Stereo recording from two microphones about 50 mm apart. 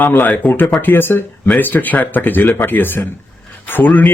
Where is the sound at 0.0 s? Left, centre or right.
Left.